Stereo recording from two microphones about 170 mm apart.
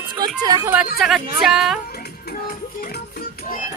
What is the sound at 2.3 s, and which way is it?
Music, 60° left (ahead or behind).